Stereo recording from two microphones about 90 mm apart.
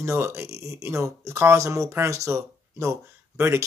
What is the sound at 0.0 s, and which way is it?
Speech, 30° right (ahead or behind).